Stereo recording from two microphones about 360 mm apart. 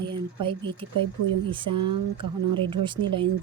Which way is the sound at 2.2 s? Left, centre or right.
Right.